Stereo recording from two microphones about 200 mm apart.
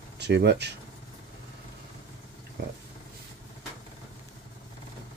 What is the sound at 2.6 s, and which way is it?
Speech, 50° right (ahead or behind).